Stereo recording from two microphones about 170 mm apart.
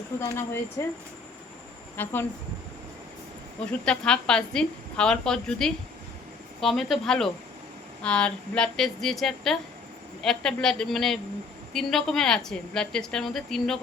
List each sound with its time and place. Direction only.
0.2 s speech: 15° left (ahead or behind)
2.0 s speech: 15° left (ahead or behind)
3.7 s a woman's voice: 5° left (ahead or behind)